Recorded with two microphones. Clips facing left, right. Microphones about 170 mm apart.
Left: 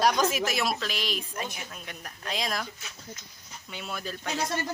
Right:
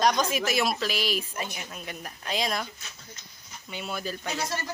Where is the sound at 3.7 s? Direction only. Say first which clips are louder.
Right 3 dB; centre (ahead or behind).